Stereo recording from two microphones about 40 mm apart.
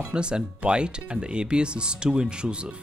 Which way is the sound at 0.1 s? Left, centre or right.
Right.